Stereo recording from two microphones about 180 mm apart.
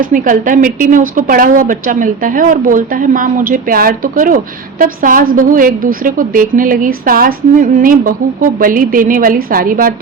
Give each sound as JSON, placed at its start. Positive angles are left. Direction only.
{"t": 0.0, "sound": "a woman's voice", "side_deg": -45}